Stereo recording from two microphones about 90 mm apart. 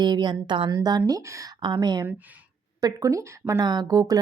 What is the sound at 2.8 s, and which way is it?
Speech, 40° right (ahead or behind).